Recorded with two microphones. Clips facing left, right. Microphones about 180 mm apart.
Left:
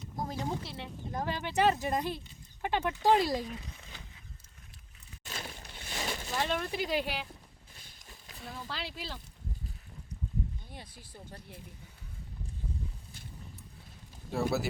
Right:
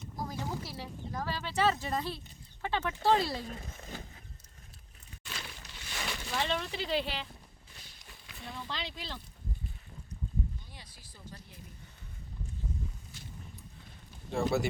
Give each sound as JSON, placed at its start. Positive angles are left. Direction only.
{"t": 0.2, "sound": "a sound", "side_deg": 25}
{"t": 1.1, "sound": "speech", "side_deg": 20}
{"t": 3.4, "sound": "speech", "side_deg": -45}
{"t": 5.2, "sound": "a sound", "side_deg": 40}
{"t": 6.3, "sound": "speech", "side_deg": 10}
{"t": 8.4, "sound": "speech", "side_deg": 5}
{"t": 10.7, "sound": "speech", "side_deg": 55}
{"t": 14.3, "sound": "speech", "side_deg": 5}